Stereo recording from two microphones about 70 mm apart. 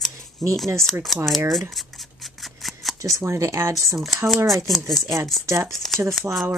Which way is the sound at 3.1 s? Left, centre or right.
Right.